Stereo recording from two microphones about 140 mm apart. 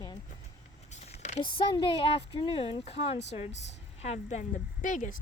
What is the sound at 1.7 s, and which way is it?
Speech, 35° left (ahead or behind).